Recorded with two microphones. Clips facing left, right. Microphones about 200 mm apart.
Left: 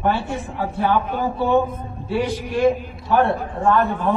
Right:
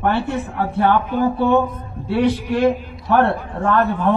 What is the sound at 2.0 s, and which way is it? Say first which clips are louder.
A man's voice: right 5 dB; 65° right (ahead or behind).